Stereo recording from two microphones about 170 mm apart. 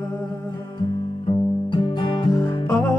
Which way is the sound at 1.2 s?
30° left (ahead or behind).